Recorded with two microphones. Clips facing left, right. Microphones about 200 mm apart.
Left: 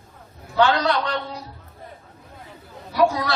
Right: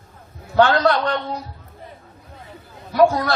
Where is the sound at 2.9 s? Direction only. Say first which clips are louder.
Right 4 dB; 50° right (ahead or behind).